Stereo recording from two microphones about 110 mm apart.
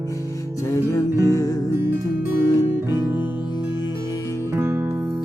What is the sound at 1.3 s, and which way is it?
Music, 30° left (ahead or behind).